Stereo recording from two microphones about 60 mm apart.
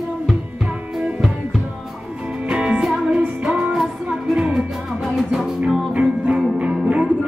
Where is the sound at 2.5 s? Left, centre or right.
Centre.